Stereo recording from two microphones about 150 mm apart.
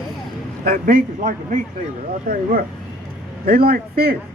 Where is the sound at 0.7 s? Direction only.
70° right (ahead or behind).